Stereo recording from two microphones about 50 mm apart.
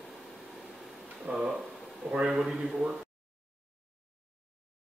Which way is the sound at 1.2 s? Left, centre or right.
Right.